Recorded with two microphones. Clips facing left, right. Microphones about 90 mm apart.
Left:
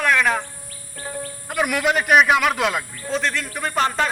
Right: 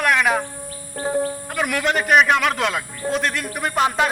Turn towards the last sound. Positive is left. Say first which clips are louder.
# right 2 dB
turn(degrees=-10)  # may be behind; listen again after turning